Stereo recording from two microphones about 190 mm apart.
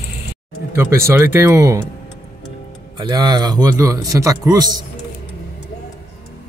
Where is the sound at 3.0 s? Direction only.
20° right (ahead or behind).